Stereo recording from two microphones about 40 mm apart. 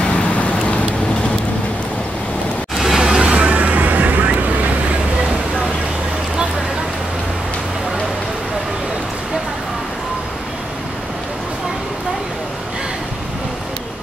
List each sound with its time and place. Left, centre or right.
0.0 s vehicle: left
2.8 s music: centre
3.2 s music: right
3.5 s vehicle: right